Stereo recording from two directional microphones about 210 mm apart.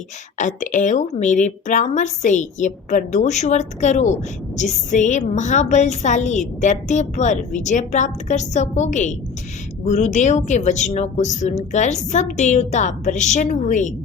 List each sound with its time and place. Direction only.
0.3 s speech: 35° left (ahead or behind)